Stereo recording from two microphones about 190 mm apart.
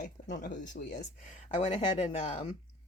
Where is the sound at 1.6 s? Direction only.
30° left (ahead or behind).